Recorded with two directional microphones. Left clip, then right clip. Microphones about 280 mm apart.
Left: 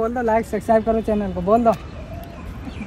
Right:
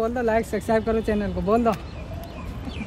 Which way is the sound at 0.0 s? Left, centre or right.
Left.